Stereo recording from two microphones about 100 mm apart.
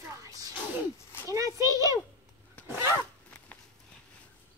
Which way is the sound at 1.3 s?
35° right (ahead or behind).